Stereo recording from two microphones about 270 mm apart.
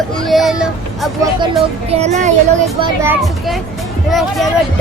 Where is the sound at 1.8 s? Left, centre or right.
Right.